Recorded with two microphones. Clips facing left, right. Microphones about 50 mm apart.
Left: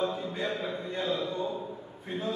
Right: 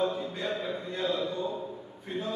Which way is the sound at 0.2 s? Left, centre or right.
Centre.